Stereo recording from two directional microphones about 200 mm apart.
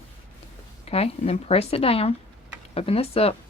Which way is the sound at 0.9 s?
30° left (ahead or behind).